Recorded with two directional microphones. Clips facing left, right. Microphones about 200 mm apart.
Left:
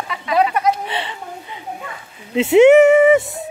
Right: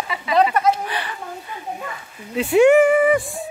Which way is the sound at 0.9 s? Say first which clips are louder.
Left 2 dB; 25° left (ahead or behind).